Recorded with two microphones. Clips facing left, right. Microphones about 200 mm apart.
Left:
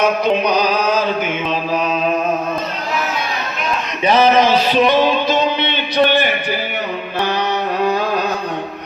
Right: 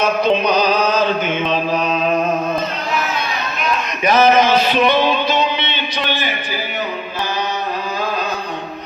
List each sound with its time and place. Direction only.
0.0 s music: 10° left (ahead or behind)
4.0 s music: 30° left (ahead or behind); by 6.3 s 60° left (ahead or behind)